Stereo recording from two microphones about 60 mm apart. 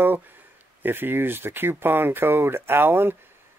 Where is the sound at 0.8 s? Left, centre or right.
Right.